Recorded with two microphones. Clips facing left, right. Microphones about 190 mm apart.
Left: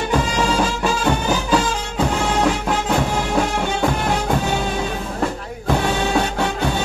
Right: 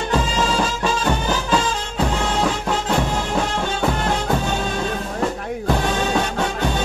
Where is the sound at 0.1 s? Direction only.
10° left (ahead or behind).